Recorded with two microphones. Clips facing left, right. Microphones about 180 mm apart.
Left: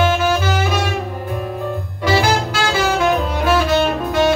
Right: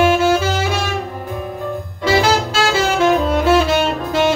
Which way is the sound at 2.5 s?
25° right (ahead or behind).